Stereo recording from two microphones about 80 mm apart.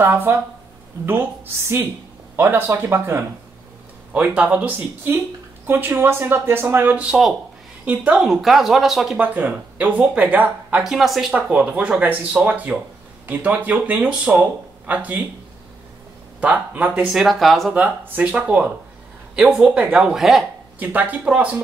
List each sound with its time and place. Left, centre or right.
0.0 s speech: right
4.1 s speech: centre
7.1 s speech: centre
7.8 s a woman's voice: centre
8.2 s speech: centre
9.2 s speech: centre
10.8 s speech: centre; by 15.2 s right
16.3 s speech: centre
17.0 s speech: centre
17.7 s speech: right
20.0 s speech: centre
20.8 s speech: right